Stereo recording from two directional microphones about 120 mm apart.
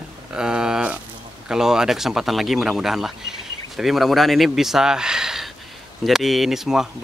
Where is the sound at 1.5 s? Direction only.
5° right (ahead or behind).